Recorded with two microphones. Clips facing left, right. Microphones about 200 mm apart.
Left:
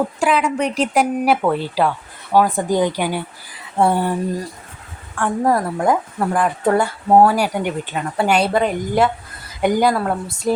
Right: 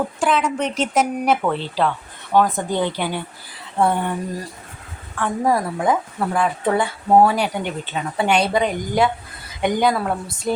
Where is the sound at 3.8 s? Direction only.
35° left (ahead or behind).